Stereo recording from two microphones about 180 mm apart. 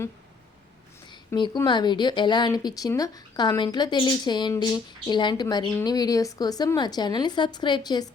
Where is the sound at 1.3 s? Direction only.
25° left (ahead or behind).